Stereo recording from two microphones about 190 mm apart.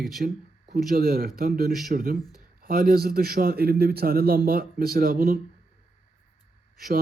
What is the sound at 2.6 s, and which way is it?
A man's voice, 50° right (ahead or behind).